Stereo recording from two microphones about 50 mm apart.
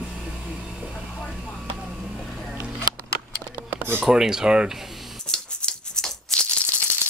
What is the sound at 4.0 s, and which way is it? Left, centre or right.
Speech, centre.